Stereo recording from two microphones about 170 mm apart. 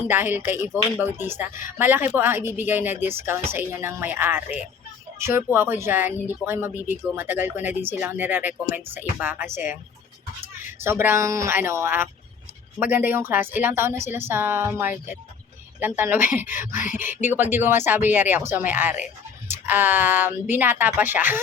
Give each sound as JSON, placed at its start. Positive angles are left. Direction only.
{"t": 0.1, "sound": "speech", "side_deg": -10}
{"t": 5.5, "sound": "speech", "side_deg": -15}
{"t": 10.8, "sound": "speech", "side_deg": -15}